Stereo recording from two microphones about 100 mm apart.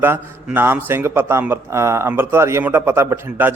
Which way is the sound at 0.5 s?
20° right (ahead or behind).